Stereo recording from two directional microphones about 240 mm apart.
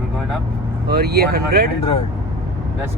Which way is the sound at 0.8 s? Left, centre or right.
Right.